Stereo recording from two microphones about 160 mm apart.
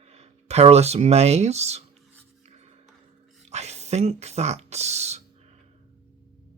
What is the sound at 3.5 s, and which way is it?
Speech, 45° right (ahead or behind).